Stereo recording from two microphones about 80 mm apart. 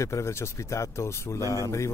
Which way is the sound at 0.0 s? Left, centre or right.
Left.